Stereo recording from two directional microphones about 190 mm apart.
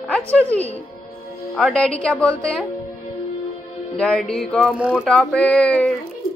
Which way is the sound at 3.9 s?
5° left (ahead or behind).